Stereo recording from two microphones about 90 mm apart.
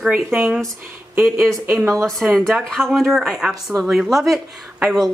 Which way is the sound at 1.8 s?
35° right (ahead or behind).